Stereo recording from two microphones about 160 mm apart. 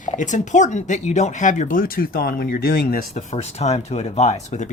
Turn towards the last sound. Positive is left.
turn(degrees=45)  # may be behind; listen again after turning